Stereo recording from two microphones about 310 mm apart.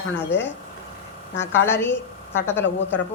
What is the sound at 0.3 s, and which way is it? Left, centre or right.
A woman's voice, centre.